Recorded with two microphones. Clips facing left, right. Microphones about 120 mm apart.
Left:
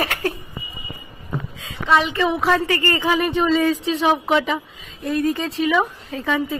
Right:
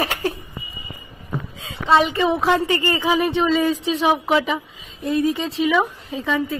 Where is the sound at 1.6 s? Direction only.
30° right (ahead or behind).